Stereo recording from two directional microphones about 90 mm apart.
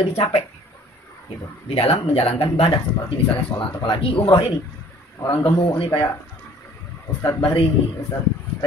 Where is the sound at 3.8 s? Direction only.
55° left (ahead or behind); by 4.5 s 85° left.